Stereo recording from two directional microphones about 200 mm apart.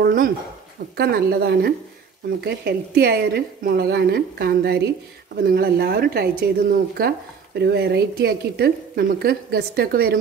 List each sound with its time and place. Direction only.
0.0 s speech: 45° right (ahead or behind)